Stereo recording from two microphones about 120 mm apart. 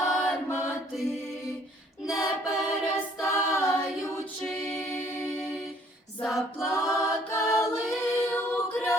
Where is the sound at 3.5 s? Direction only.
25° left (ahead or behind).